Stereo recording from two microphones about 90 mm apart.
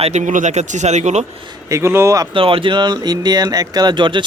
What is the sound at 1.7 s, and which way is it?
Speech, 30° right (ahead or behind).